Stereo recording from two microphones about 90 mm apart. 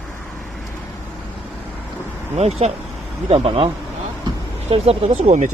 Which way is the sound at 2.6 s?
90° right.